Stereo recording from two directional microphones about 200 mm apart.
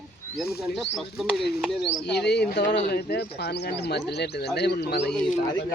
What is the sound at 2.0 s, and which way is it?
Speech, 55° left (ahead or behind).